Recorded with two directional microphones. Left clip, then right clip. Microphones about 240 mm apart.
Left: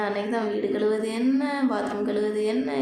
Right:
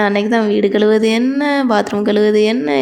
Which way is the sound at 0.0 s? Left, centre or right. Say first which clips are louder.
Right 12 dB; right.